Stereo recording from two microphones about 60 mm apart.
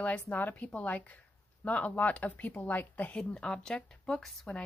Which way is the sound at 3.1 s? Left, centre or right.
Centre.